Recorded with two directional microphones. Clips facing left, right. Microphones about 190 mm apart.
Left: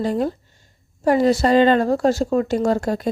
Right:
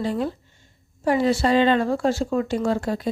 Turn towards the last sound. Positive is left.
turn(degrees=45)  # may be behind; listen again after turning